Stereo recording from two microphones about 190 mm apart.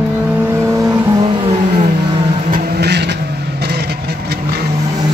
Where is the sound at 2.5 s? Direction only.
60° right (ahead or behind).